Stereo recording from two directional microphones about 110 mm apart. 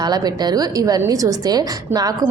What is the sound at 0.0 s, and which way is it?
A woman's voice, 40° right (ahead or behind).